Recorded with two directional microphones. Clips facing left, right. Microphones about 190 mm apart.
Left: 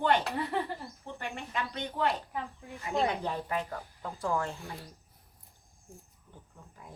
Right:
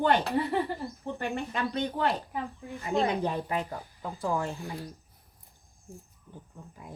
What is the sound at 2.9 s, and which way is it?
Speech, 15° right (ahead or behind).